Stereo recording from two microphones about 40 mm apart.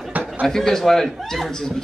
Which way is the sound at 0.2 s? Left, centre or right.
Right.